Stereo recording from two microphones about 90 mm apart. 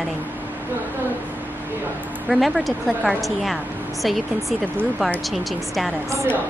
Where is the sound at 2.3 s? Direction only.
Centre (ahead or behind).